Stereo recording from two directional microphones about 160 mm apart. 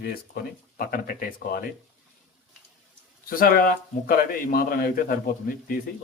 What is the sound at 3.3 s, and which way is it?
A man's voice, 60° left (ahead or behind).